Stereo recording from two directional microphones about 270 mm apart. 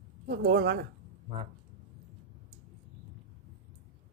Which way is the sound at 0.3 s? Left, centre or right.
Right.